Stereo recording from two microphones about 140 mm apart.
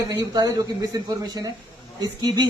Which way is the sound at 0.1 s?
30° right (ahead or behind).